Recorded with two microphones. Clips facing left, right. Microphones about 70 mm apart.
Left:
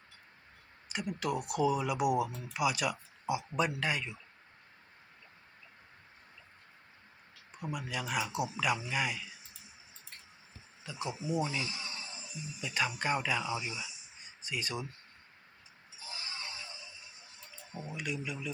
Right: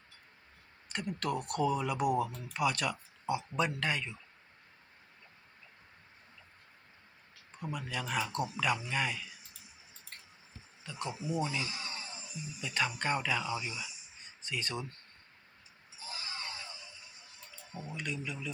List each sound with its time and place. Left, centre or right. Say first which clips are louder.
0.9 s speech: left 1 dB; centre
7.5 s speech: left 1 dB; centre
10.8 s speech: left 1 dB; centre
11.6 s music: even; right
12.6 s speech: even; centre
16.3 s a sound: right 1 dB; right
17.7 s speech: left 1 dB; centre